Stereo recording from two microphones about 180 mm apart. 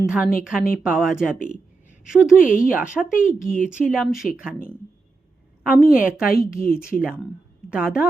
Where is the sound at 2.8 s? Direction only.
5° right (ahead or behind).